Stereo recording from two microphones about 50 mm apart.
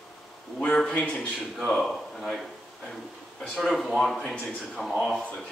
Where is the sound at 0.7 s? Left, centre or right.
Left.